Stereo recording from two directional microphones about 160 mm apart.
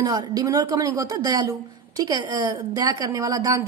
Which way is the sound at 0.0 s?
25° right (ahead or behind).